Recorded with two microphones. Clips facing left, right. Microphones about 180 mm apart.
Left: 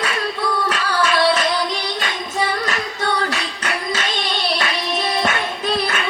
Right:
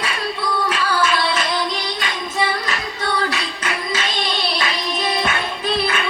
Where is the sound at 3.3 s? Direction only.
45° left (ahead or behind).